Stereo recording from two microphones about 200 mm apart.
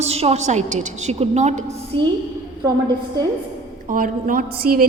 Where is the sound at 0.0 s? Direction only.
30° right (ahead or behind).